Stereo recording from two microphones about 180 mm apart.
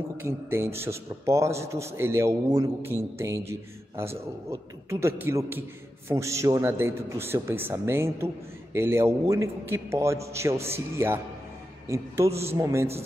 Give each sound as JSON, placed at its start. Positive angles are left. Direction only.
{"t": 0.2, "sound": "a man's voice", "side_deg": -15}
{"t": 12.4, "sound": "a man's voice", "side_deg": -15}